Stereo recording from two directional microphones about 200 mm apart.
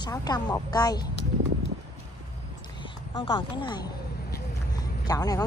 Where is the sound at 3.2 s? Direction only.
25° left (ahead or behind).